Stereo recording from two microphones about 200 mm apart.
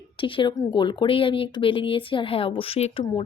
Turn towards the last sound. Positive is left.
turn(degrees=30)  # may be behind; listen again after turning